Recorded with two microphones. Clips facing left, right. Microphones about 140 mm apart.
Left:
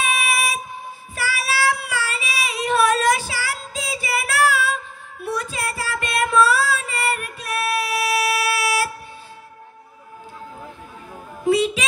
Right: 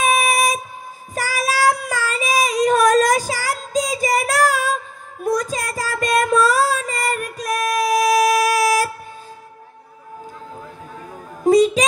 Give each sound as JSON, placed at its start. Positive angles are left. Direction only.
{"t": 0.0, "sound": "train", "side_deg": -40}
{"t": 1.1, "sound": "child singing", "side_deg": -40}
{"t": 5.2, "sound": "music", "side_deg": -40}
{"t": 11.4, "sound": "a sound", "side_deg": -40}